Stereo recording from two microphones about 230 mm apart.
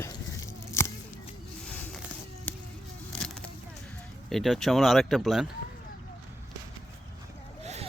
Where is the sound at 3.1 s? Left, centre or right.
Centre.